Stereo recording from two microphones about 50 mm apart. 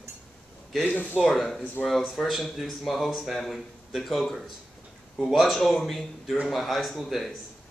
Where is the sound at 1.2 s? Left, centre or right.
Centre.